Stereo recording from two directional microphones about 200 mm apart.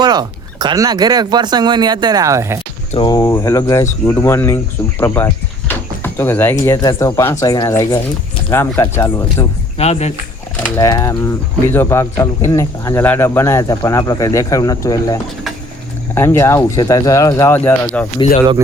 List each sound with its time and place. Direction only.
0.0 s speech: 20° right (ahead or behind)
2.9 s speech: 20° left (ahead or behind)
9.7 s speech: 30° left (ahead or behind)
10.8 s speech: 15° left (ahead or behind)